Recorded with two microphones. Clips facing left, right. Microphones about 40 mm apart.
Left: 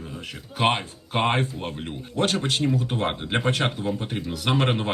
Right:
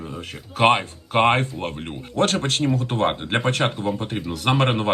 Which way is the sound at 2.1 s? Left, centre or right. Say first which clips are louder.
Right 3 dB; right.